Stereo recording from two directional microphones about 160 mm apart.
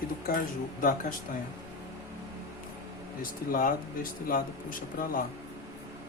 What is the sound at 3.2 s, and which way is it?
Speech, 60° left (ahead or behind).